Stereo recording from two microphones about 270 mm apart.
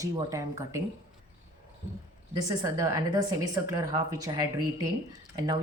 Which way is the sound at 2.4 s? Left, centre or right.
Centre.